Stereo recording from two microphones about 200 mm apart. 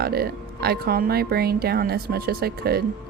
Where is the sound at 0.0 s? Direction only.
50° right (ahead or behind).